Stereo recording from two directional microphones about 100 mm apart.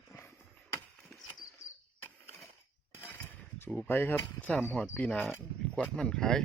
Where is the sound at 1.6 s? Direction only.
35° left (ahead or behind).